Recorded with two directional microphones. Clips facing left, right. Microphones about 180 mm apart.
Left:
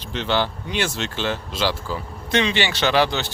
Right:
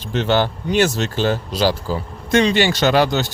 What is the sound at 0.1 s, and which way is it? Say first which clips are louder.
Speech: right 5 dB; 45° right (ahead or behind).